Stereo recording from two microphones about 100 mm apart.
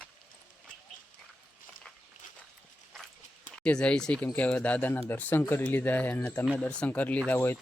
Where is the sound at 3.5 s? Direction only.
10° left (ahead or behind).